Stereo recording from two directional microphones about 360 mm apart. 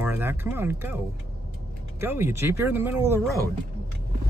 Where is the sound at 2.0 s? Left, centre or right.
Centre.